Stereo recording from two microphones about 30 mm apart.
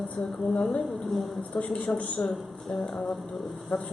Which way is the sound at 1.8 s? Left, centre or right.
Left.